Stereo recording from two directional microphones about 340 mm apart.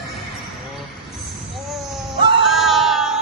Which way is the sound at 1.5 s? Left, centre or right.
Centre.